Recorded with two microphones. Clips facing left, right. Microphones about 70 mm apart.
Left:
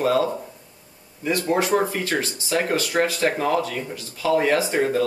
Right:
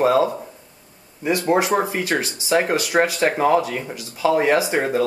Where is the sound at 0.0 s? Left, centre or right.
Right.